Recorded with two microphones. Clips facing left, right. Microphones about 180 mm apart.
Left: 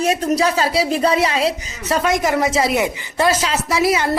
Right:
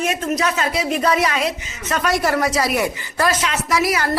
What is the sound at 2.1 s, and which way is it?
A woman's voice, 20° left (ahead or behind).